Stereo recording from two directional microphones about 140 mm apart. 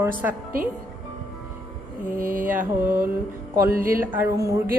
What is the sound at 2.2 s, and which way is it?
Mantra, 80° right.